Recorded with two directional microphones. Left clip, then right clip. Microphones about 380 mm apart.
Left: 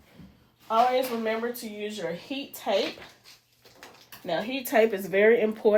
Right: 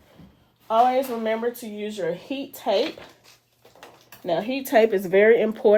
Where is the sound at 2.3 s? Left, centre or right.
Right.